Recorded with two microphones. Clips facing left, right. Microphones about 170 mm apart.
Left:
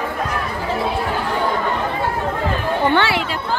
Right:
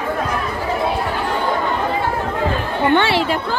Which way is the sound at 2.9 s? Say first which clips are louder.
Right 2 dB; 25° right (ahead or behind).